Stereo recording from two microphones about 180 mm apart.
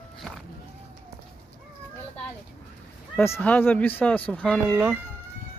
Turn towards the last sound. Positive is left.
turn(degrees=-5)  # may be behind; listen again after turning